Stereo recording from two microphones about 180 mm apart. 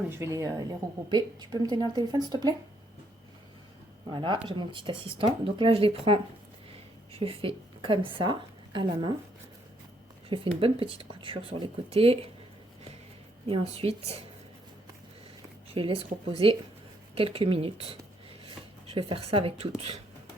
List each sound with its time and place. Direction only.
0.1 s a woman's voice: 15° right (ahead or behind)
4.1 s a woman's voice: 25° right (ahead or behind)
10.2 s speech: 30° right (ahead or behind)
13.5 s speech: 35° right (ahead or behind)
15.7 s speech: 30° right (ahead or behind)